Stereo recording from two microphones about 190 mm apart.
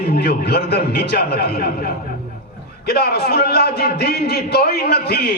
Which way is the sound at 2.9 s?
55° left (ahead or behind).